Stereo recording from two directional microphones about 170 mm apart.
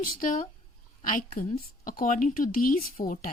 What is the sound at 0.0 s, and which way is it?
A woman's voice, 55° left (ahead or behind).